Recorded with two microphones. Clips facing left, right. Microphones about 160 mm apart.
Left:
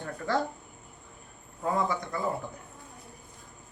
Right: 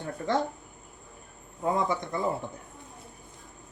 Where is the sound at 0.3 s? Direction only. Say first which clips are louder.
Right 1 dB; 20° right (ahead or behind).